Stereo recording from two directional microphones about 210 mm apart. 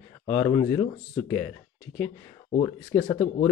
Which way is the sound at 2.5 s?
25° left (ahead or behind).